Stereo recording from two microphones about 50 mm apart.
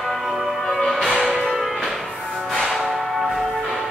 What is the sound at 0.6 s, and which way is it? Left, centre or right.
Music, centre.